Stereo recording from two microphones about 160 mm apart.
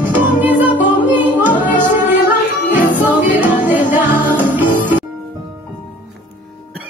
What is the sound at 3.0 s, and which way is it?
Music, 10° right (ahead or behind).